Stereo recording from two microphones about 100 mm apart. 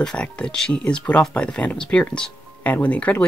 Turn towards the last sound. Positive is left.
turn(degrees=15)  # may be behind; listen again after turning